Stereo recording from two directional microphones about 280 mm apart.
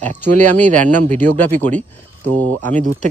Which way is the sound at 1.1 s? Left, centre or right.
Centre.